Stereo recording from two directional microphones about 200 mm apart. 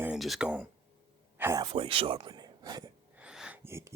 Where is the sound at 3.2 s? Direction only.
5° right (ahead or behind).